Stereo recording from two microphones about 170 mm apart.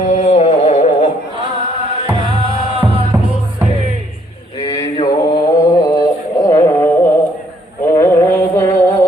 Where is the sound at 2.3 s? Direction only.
35° right (ahead or behind).